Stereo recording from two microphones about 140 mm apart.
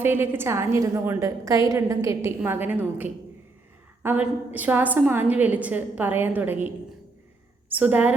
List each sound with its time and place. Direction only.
0.0 s a woman's voice: 15° right (ahead or behind)
7.7 s a woman's voice: 10° right (ahead or behind)